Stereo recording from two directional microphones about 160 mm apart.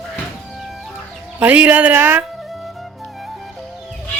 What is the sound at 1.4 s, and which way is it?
Speech, 10° right (ahead or behind).